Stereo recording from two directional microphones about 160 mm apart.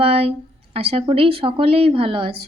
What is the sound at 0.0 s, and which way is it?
A woman's voice, 35° right (ahead or behind).